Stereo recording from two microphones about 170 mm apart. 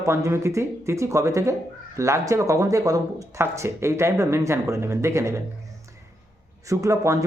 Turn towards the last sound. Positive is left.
turn(degrees=-20)  # may be behind; listen again after turning